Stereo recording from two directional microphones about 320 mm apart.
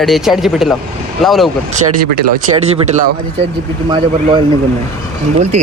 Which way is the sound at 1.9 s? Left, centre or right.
Right.